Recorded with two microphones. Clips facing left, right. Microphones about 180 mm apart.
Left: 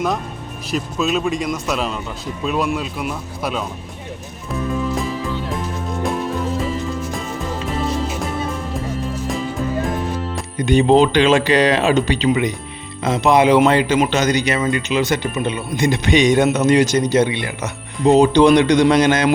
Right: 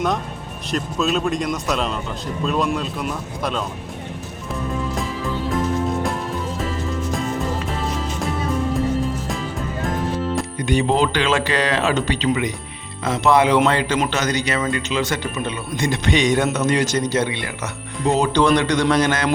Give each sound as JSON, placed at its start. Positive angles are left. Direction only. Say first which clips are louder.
{"t": 0.7, "sound": "a man's voice", "louder": "left 1 dB", "side_deg": 5}
{"t": 10.7, "sound": "speech", "louder": "left 6 dB", "side_deg": 20}